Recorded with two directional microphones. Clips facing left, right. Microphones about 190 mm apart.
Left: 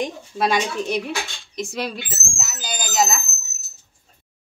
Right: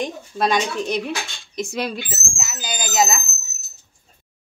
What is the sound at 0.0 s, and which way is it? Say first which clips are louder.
Speech: even; 5° left (ahead or behind).